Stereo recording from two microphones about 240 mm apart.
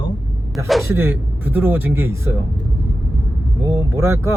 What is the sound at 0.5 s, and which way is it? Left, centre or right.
Speech, centre.